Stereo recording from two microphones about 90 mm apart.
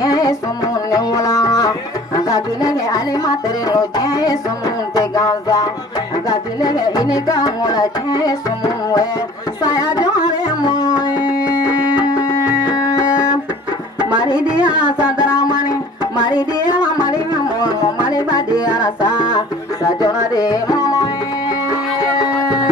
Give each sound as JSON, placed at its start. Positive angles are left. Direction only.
{"t": 0.0, "sound": "music", "side_deg": 45}
{"t": 9.6, "sound": "carnatic music", "side_deg": 45}
{"t": 10.9, "sound": "music", "side_deg": -15}
{"t": 14.6, "sound": "music", "side_deg": -15}
{"t": 16.3, "sound": "music", "side_deg": 50}